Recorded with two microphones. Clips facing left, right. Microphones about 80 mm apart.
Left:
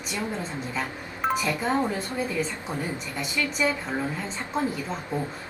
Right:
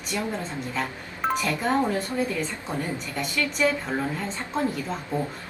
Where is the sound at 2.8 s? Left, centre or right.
Centre.